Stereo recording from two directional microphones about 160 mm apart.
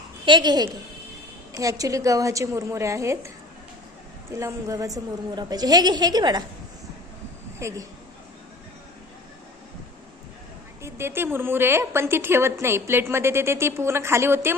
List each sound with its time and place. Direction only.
0.3 s a woman's voice: 30° right (ahead or behind)
4.4 s a woman's voice: 20° right (ahead or behind)
7.6 s a woman's voice: 20° right (ahead or behind)
10.8 s a woman's voice: 15° right (ahead or behind)